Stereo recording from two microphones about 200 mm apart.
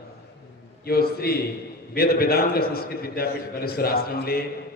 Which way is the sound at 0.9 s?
50° left (ahead or behind).